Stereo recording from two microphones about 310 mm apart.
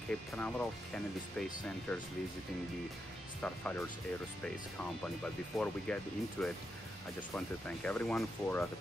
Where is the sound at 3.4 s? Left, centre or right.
Centre.